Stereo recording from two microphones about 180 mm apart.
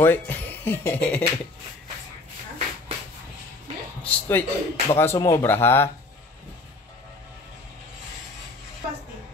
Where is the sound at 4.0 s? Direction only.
10° left (ahead or behind).